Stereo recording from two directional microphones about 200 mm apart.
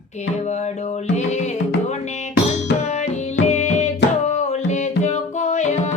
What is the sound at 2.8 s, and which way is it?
Music, 35° left (ahead or behind).